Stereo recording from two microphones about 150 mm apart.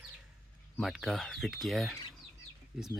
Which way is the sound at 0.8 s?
Centre (ahead or behind).